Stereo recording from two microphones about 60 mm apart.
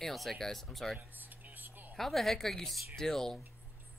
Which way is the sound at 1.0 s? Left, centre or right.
Right.